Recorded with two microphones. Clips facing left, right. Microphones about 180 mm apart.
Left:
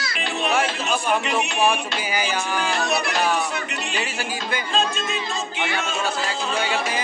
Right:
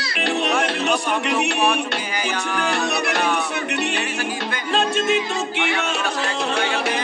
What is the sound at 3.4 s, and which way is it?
Music, 65° right (ahead or behind).